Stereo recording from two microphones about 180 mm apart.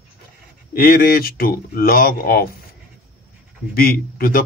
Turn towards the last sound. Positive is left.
turn(degrees=55)  # may be behind; listen again after turning